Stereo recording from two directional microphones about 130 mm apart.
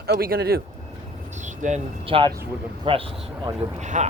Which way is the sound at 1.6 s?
75° right (ahead or behind).